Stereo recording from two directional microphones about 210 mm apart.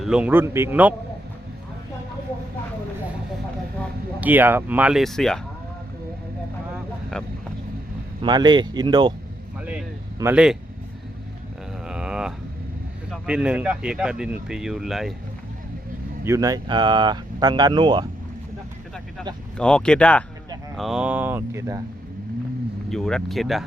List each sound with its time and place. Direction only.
0.0 s speech: 5° right (ahead or behind)
4.2 s speech: 10° right (ahead or behind)
8.2 s speech: 20° right (ahead or behind)
9.6 s vehicle: 5° right (ahead or behind)
11.9 s a sound: 5° right (ahead or behind)
13.1 s speech: 5° right (ahead or behind)
16.2 s speech: 15° right (ahead or behind)
19.5 s speech: 5° left (ahead or behind); by 21.8 s 15° right (ahead or behind)
22.9 s speech: centre (ahead or behind)